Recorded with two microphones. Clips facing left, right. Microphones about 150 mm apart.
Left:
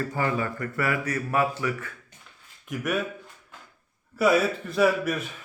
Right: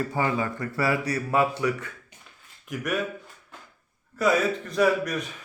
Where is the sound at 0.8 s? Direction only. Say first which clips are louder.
Right 2 dB; 35° right (ahead or behind).